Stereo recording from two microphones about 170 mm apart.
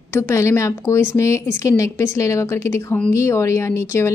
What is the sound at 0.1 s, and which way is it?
A woman's voice, 15° left (ahead or behind).